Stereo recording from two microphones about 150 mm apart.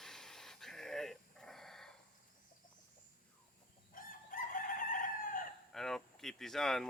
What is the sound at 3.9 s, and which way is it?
Chicken, 65° left (ahead or behind).